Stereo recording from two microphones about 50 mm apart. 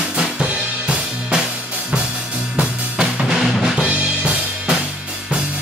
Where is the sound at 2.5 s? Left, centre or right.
Centre.